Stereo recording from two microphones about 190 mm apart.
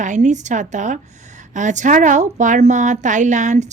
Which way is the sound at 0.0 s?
40° right (ahead or behind).